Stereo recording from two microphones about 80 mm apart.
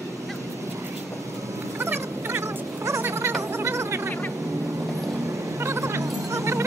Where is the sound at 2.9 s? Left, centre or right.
Right.